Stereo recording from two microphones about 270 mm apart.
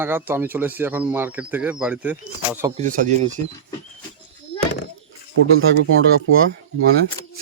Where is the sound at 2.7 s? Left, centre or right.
Right.